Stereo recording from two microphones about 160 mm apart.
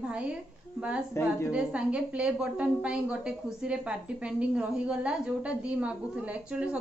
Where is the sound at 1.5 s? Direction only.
5° right (ahead or behind).